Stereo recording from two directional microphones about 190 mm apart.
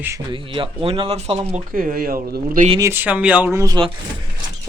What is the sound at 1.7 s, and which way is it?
Speech, 50° right (ahead or behind).